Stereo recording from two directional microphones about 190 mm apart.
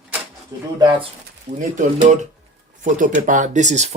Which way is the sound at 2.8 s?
45° right (ahead or behind).